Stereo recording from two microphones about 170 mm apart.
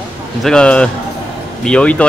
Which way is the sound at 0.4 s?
5° left (ahead or behind).